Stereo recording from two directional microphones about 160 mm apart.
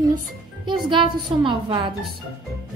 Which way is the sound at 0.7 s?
30° right (ahead or behind).